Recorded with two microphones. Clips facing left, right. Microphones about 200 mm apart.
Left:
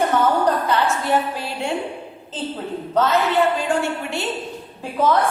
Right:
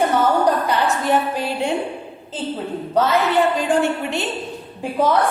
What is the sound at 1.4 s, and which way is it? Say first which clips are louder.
Speech: right 4 dB; 15° right (ahead or behind).